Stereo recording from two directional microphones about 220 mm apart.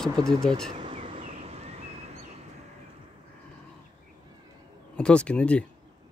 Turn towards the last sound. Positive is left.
turn(degrees=5)  # may be behind; listen again after turning